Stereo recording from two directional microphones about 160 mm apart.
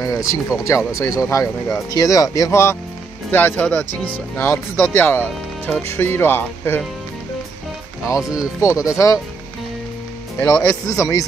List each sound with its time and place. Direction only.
0.0 s speech: 20° left (ahead or behind)
8.6 s speech: 20° left (ahead or behind)
10.4 s speech: 15° left (ahead or behind)